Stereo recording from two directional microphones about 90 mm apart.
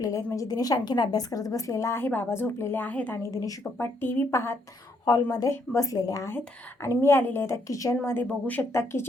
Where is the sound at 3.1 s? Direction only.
40° left (ahead or behind).